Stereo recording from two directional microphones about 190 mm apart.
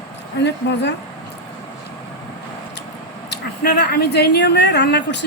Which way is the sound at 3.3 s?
60° left (ahead or behind).